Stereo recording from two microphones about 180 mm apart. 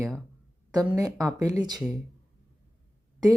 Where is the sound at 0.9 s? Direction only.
15° right (ahead or behind).